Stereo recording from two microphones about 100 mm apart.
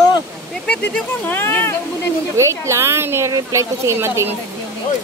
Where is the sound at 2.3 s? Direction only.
30° right (ahead or behind).